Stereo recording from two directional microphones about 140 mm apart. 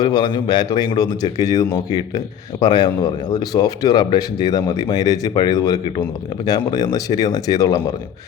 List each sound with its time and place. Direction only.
0.0 s speech: 30° left (ahead or behind)